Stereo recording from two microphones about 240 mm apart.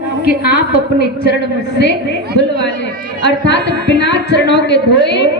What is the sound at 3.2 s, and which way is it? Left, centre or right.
Speech, left.